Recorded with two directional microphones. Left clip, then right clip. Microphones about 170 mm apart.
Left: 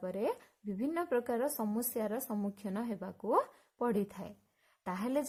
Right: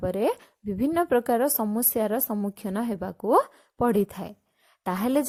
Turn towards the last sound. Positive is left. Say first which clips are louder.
# right 10 dB
turn(degrees=-45)  # may be behind; listen again after turning